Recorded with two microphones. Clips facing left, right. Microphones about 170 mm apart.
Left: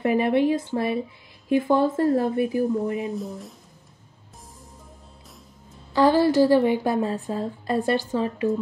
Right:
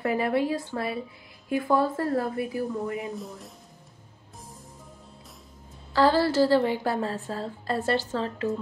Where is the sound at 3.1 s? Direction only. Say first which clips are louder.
Left 6 dB; centre (ahead or behind).